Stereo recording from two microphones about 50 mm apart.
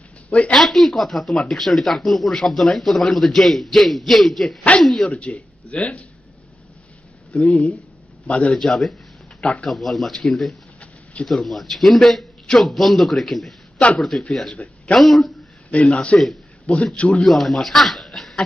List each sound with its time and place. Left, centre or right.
0.5 s speech: centre
5.0 s speech: left
7.3 s speech: centre
8.3 s speech: left
8.5 s speech: centre
9.4 s speech: left
9.7 s speech: centre
13.7 s a man's voice: left
15.0 s speech: centre
15.7 s speech: left
17.2 s speech: centre